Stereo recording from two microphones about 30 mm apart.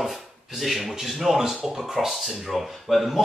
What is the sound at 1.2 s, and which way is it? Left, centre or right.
A man's voice, centre.